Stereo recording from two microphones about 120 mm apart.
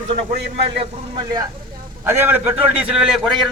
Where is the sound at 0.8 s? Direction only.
40° right (ahead or behind).